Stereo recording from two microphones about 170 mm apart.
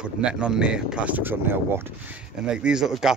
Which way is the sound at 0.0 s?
5° right (ahead or behind).